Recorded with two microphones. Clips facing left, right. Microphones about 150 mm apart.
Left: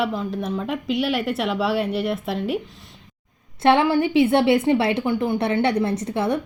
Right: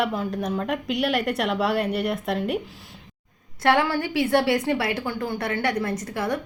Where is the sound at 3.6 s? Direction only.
20° left (ahead or behind).